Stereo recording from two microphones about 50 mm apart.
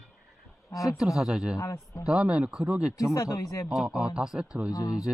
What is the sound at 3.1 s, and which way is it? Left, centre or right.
Speech, left.